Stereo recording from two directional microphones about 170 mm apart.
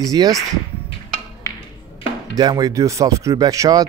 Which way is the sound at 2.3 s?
25° right (ahead or behind).